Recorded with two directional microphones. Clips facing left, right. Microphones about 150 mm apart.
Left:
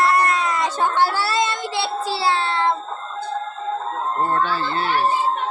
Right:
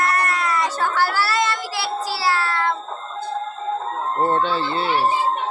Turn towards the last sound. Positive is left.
turn(degrees=-20)  # may be behind; listen again after turning